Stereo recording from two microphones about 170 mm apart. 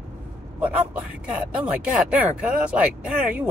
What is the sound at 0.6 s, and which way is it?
Speech, 10° right (ahead or behind).